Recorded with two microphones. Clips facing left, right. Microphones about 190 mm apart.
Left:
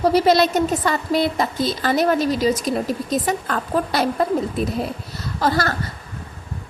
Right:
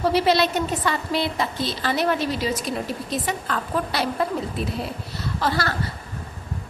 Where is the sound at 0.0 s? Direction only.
40° left (ahead or behind).